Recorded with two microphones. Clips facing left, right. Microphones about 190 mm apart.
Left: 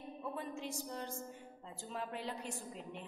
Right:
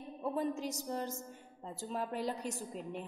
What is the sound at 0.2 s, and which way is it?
A woman's voice, 40° right (ahead or behind).